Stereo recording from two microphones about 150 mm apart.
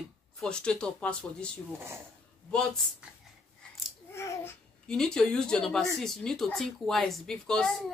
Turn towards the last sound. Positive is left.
turn(degrees=5)  # may be behind; listen again after turning